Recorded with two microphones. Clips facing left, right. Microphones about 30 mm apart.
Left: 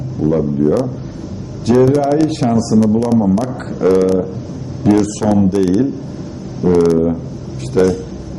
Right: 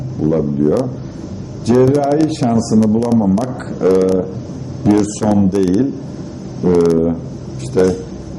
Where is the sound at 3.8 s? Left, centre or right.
Centre.